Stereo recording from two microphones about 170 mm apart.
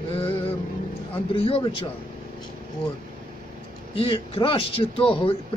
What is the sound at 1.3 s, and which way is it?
Speech, 35° left (ahead or behind).